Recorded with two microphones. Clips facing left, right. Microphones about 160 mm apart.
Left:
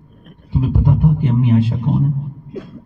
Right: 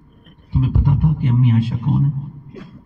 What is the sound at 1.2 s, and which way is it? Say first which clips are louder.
Speech: left 3 dB; 30° left (ahead or behind).